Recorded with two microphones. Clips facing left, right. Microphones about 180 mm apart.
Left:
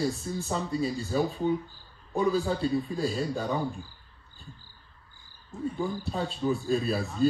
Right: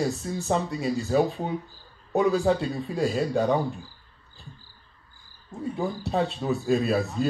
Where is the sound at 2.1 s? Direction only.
75° right (ahead or behind).